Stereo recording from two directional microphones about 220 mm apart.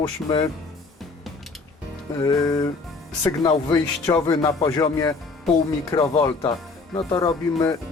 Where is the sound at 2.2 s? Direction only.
15° left (ahead or behind).